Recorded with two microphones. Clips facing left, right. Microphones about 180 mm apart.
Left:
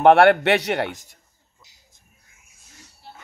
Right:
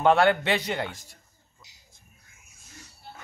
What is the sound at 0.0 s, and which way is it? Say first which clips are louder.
Speech: left 7 dB; 70° left (ahead or behind).